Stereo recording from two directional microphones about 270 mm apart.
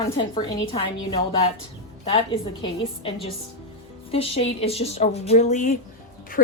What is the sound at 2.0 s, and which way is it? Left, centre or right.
A woman's voice, left.